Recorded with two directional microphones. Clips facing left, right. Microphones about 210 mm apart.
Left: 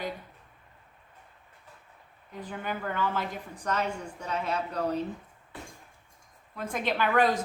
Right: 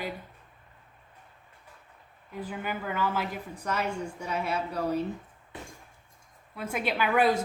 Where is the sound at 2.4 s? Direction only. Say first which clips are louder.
Right 1 dB; 10° right (ahead or behind).